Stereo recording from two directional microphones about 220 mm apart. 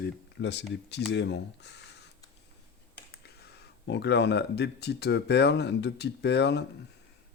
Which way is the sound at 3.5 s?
50° left (ahead or behind).